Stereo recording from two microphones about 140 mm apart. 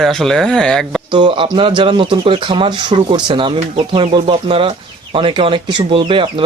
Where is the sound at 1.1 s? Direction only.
35° right (ahead or behind).